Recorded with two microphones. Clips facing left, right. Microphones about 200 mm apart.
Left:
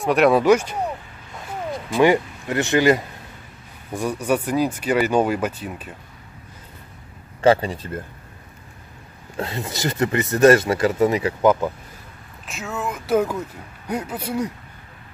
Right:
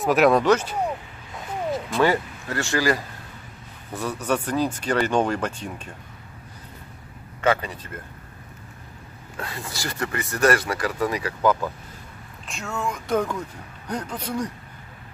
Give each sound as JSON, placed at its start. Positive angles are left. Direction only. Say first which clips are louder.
{"t": 0.0, "sound": "speech", "louder": "left 2 dB", "side_deg": 0}
{"t": 2.0, "sound": "speech", "louder": "left 5 dB", "side_deg": 15}
{"t": 7.4, "sound": "speech", "louder": "left 6 dB", "side_deg": 30}
{"t": 9.4, "sound": "speech", "louder": "left 7 dB", "side_deg": 20}
{"t": 12.4, "sound": "speech", "louder": "left 1 dB", "side_deg": 0}